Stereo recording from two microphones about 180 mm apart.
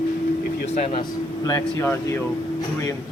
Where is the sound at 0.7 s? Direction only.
30° left (ahead or behind).